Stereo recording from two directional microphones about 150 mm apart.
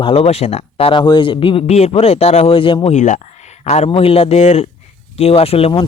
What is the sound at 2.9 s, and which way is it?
A man's voice, 55° left (ahead or behind).